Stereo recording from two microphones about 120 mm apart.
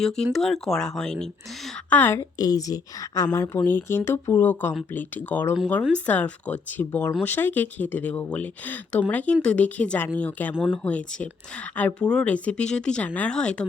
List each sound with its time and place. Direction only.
0.0 s speech: 5° left (ahead or behind)
2.1 s a woman's voice: 30° left (ahead or behind)
3.6 s a woman's voice: 15° left (ahead or behind)